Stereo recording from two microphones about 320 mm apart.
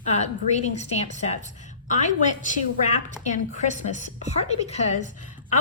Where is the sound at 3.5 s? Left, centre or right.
Left.